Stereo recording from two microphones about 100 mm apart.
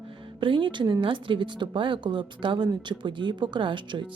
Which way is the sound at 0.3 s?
55° right (ahead or behind).